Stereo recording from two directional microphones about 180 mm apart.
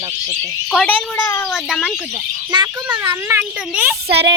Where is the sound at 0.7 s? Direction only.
5° left (ahead or behind).